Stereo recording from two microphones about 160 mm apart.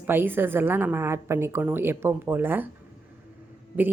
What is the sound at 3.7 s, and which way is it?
Speech, 10° right (ahead or behind).